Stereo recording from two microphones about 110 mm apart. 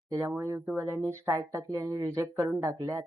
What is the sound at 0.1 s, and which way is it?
Speech, 25° right (ahead or behind).